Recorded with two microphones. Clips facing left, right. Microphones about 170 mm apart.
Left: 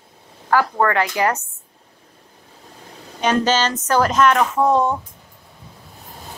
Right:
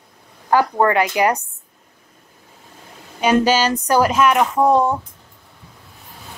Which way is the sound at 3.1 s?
10° right (ahead or behind).